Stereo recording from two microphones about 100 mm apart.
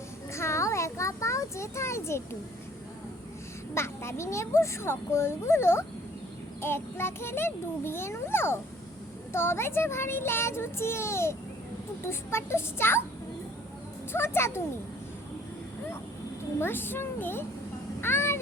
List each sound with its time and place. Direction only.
0.3 s a sound: 30° left (ahead or behind)
3.8 s a child's voice: 25° left (ahead or behind)
14.1 s a child's voice: 25° left (ahead or behind)
16.6 s a child's voice: 20° left (ahead or behind)
18.0 s music: 25° left (ahead or behind)